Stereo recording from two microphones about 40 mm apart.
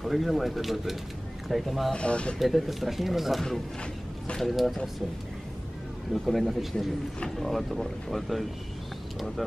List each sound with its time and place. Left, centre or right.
0.0 s speech: centre
2.0 s speech: left
2.3 s speech: centre
6.1 s speech: centre